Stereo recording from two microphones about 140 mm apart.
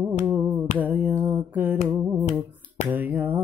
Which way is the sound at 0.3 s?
15° right (ahead or behind).